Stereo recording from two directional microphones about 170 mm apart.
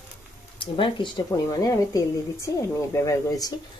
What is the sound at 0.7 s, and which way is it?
A woman's voice, 30° left (ahead or behind).